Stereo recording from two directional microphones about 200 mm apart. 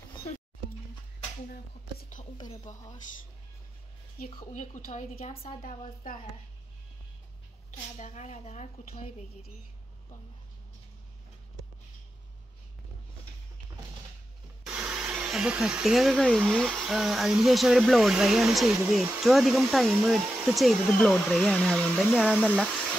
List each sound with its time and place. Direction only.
1.5 s a sound: 45° left (ahead or behind)
2.3 s speech: 20° left (ahead or behind)
4.5 s a woman's voice: 40° left (ahead or behind)
5.3 s a woman's voice: 30° left (ahead or behind)
8.0 s a woman's voice: 35° left (ahead or behind)
14.7 s speech: 5° right (ahead or behind)